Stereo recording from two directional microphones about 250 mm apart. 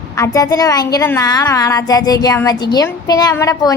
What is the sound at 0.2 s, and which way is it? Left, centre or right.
A woman's voice, centre.